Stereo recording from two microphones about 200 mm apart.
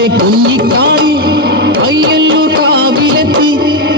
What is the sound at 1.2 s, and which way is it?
Music, 50° right (ahead or behind).